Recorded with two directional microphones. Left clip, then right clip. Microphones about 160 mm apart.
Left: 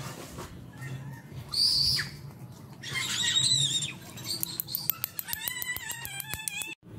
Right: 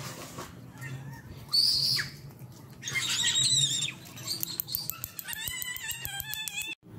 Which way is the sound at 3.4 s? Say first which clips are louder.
Even; 45° right (ahead or behind).